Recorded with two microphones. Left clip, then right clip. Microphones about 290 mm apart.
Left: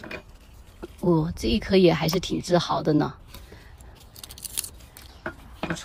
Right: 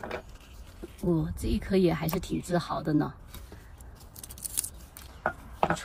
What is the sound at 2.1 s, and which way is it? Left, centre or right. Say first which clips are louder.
Speech: left 7 dB; left.